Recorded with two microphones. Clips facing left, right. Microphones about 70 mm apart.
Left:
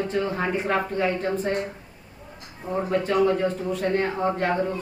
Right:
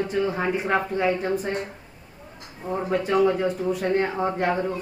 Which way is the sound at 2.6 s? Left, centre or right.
Centre.